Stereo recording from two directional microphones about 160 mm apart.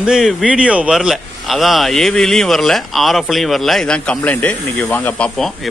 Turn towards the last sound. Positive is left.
turn(degrees=0)  # may be behind; listen again after turning